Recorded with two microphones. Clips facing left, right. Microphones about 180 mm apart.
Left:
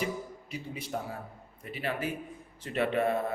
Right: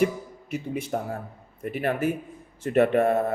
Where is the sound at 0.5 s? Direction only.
50° right (ahead or behind).